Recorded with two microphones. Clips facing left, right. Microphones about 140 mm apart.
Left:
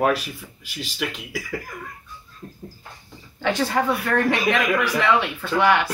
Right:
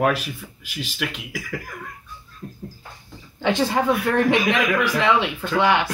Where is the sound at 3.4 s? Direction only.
20° right (ahead or behind).